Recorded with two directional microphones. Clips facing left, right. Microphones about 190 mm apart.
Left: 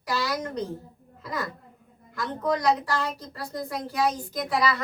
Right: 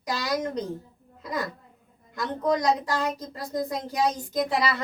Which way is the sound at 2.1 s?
20° right (ahead or behind).